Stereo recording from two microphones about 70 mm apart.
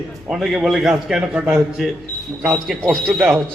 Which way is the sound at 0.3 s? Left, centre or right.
Centre.